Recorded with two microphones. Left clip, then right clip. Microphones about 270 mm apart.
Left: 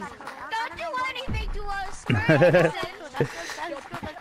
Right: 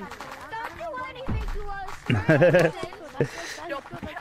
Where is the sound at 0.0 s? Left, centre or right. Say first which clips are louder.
Left 1 dB; left.